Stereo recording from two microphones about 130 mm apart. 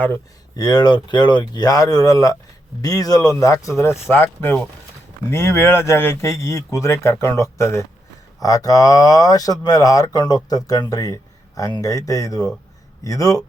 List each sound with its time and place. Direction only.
0.5 s speech: 30° left (ahead or behind)